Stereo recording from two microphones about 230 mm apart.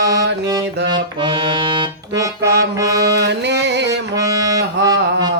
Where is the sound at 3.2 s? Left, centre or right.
Right.